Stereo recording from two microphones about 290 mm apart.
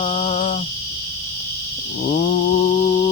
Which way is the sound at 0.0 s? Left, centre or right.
Centre.